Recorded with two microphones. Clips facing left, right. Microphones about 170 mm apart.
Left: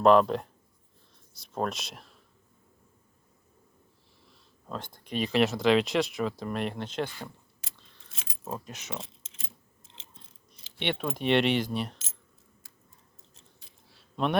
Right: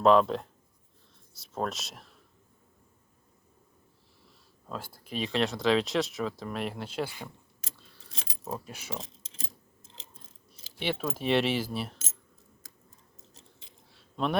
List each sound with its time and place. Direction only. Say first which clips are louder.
0.0 s speech: left 1 dB; centre (ahead or behind)
4.3 s speech: left 1 dB; 5° right (ahead or behind)
8.1 s a sound: right 4 dB; 35° right (ahead or behind)
8.5 s speech: even; 10° right (ahead or behind)
9.0 s a sound: right 6 dB; 35° right (ahead or behind)
9.9 s mechanisms: right 2 dB; 40° right (ahead or behind)
10.8 s speech: left 1 dB; centre (ahead or behind)
14.2 s speech: left 2 dB; centre (ahead or behind)